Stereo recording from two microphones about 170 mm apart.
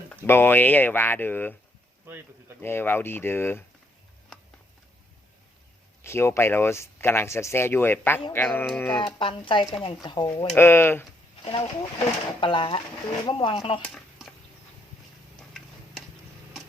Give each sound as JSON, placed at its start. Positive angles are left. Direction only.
{"t": 0.3, "sound": "speech", "side_deg": 15}
{"t": 2.0, "sound": "a sound", "side_deg": -10}
{"t": 2.6, "sound": "speech", "side_deg": 10}
{"t": 6.0, "sound": "speech", "side_deg": 15}
{"t": 9.0, "sound": "speech", "side_deg": 25}
{"t": 10.5, "sound": "speech", "side_deg": 15}
{"t": 11.4, "sound": "speech", "side_deg": 30}
{"t": 13.8, "sound": "a sound", "side_deg": 0}
{"t": 15.4, "sound": "tick-tock", "side_deg": 0}